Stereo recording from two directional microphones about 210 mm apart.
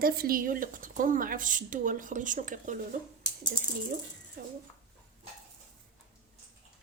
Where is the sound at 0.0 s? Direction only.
45° right (ahead or behind).